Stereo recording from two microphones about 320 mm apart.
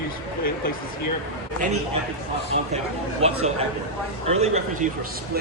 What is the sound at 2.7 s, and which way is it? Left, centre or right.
Speech, centre.